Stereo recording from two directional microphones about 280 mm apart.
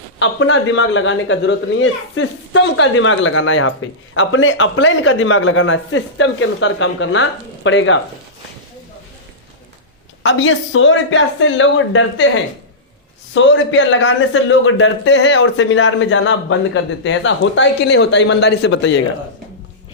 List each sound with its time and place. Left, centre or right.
0.2 s speech: left
10.2 s a man's voice: left